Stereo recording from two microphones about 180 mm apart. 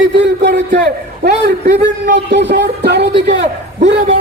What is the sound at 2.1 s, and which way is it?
A man's voice, 75° right (ahead or behind).